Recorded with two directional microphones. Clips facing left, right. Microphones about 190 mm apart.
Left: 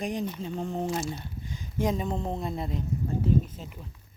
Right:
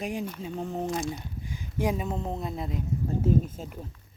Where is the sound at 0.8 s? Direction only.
5° left (ahead or behind).